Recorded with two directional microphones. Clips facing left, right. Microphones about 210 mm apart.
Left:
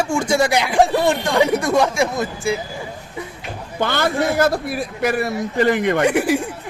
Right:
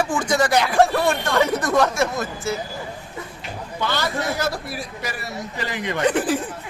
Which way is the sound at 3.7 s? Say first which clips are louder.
Left 5 dB; 50° left (ahead or behind).